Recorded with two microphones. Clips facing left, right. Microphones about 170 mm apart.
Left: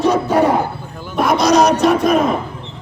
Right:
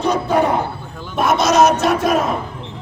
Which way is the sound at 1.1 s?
Centre (ahead or behind).